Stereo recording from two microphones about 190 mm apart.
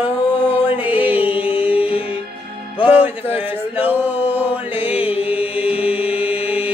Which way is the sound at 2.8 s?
10° right (ahead or behind).